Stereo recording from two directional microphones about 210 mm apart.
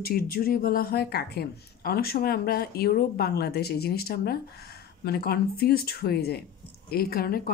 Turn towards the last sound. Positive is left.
turn(degrees=45)  # may be behind; listen again after turning